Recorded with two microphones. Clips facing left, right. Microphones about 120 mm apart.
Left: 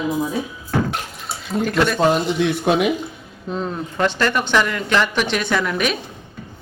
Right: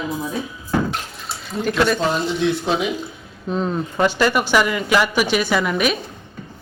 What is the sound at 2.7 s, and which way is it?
Speech, 60° left (ahead or behind).